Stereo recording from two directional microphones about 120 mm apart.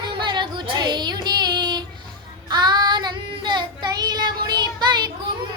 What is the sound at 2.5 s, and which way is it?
Child singing, 35° right (ahead or behind).